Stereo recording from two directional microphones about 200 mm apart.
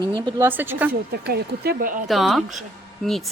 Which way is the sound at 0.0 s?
25° right (ahead or behind).